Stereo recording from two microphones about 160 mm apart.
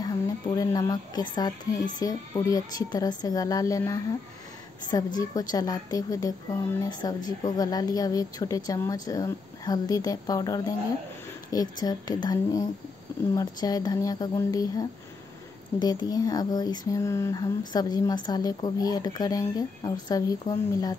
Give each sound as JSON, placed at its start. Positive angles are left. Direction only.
{"t": 0.6, "sound": "speech", "side_deg": 25}